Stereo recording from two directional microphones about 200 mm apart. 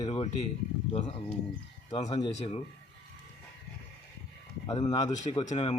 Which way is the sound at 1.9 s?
30° left (ahead or behind).